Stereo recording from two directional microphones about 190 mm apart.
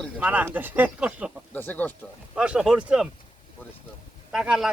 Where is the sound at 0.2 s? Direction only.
10° right (ahead or behind).